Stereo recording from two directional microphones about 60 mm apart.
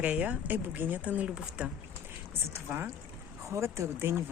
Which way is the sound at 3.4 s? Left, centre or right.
Right.